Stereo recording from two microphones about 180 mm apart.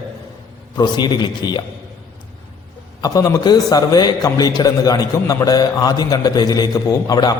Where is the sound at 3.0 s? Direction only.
20° left (ahead or behind).